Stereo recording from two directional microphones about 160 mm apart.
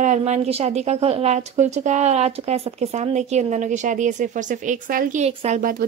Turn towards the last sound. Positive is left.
turn(degrees=-60)  # may be behind; listen again after turning